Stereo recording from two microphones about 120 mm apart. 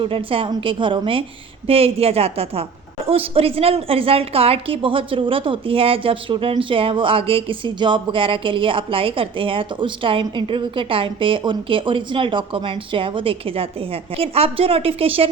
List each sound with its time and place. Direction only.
0.0 s a woman's voice: 50° right (ahead or behind)